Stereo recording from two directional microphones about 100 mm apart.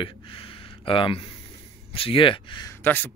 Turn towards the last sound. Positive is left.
turn(degrees=20)  # may be behind; listen again after turning